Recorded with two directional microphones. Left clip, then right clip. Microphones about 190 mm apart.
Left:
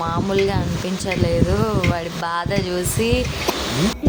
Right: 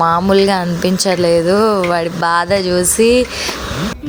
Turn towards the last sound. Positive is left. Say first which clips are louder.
# right 9 dB
turn(degrees=-30)  # may be behind; listen again after turning